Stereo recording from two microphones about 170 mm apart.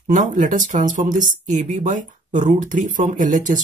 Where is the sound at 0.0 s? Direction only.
50° right (ahead or behind).